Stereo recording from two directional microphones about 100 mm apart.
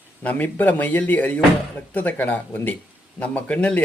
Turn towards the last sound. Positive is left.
turn(degrees=10)  # may be behind; listen again after turning